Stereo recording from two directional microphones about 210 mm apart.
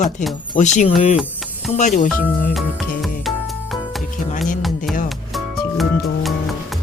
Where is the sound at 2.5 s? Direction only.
Centre (ahead or behind).